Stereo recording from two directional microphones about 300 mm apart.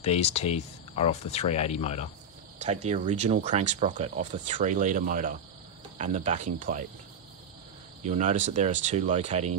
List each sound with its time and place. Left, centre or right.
0.0 s speech: left
2.9 s speech: right
8.1 s speech: right